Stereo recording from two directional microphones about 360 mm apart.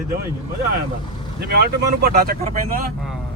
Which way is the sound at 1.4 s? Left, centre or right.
Right.